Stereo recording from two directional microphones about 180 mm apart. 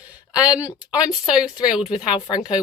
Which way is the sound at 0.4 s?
20° left (ahead or behind).